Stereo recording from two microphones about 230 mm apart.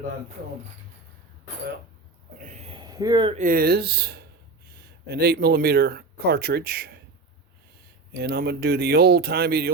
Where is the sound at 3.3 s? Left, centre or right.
Right.